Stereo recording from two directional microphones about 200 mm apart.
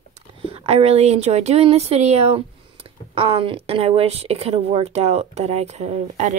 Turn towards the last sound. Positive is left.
turn(degrees=-35)  # may be behind; listen again after turning